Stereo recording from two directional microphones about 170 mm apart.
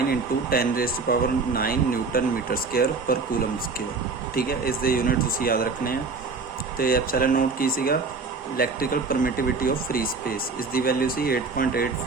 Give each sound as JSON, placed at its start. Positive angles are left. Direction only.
{"t": 0.1, "sound": "speech", "side_deg": 60}
{"t": 4.4, "sound": "speech", "side_deg": 60}